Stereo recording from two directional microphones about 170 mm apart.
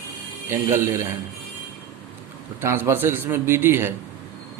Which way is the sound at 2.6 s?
15° right (ahead or behind).